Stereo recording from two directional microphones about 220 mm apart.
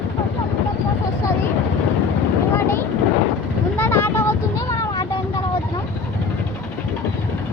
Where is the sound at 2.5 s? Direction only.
10° left (ahead or behind).